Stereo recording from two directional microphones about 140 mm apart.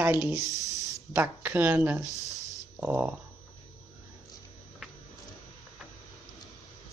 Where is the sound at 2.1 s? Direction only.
25° left (ahead or behind).